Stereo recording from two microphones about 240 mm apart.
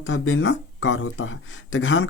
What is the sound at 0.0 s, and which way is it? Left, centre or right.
Speech, left.